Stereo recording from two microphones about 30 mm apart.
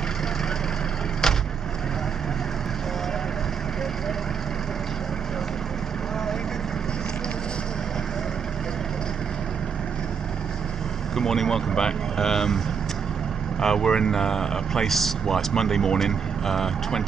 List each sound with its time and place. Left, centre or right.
1.2 s vehicle: centre
11.1 s speech: centre